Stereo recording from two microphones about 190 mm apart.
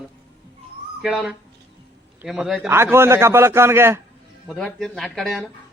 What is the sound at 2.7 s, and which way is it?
A man's voice, 15° right (ahead or behind).